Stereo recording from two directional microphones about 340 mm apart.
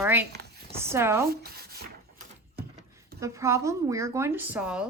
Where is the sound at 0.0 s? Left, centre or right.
Centre.